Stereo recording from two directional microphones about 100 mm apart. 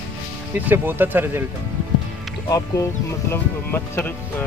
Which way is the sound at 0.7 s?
20° right (ahead or behind).